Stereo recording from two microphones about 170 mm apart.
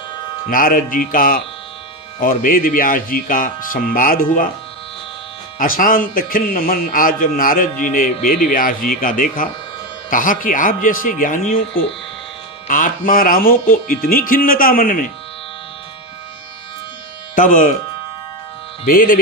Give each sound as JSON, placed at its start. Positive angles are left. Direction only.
{"t": 0.5, "sound": "a man's voice", "side_deg": 55}
{"t": 5.5, "sound": "a man's voice", "side_deg": 55}
{"t": 12.6, "sound": "a man's voice", "side_deg": 50}
{"t": 17.3, "sound": "speech", "side_deg": 50}
{"t": 18.9, "sound": "a man's voice", "side_deg": 55}